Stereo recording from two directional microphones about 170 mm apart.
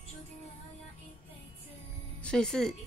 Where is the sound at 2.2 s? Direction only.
5° left (ahead or behind).